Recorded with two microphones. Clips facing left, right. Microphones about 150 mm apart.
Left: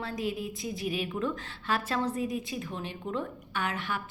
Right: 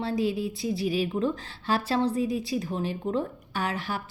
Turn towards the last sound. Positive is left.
turn(degrees=-35)  # may be behind; listen again after turning